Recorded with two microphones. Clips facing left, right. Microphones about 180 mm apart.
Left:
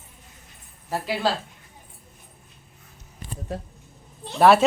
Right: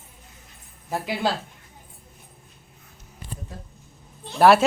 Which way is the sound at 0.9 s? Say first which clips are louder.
Even; 15° right (ahead or behind).